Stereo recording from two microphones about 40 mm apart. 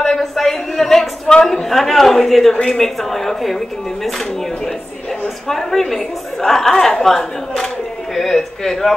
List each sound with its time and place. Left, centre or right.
0.0 s a sound: centre
1.4 s a woman's voice: centre
5.5 s a woman's voice: centre